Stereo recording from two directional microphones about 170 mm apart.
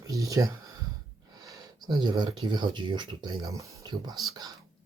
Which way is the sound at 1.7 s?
25° right (ahead or behind).